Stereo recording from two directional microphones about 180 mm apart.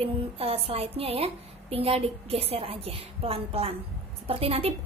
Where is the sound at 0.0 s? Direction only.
30° right (ahead or behind).